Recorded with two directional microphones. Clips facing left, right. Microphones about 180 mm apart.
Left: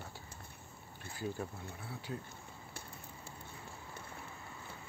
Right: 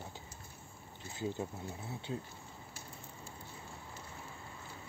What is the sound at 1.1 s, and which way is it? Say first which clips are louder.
Speech: right 2 dB; 20° right (ahead or behind).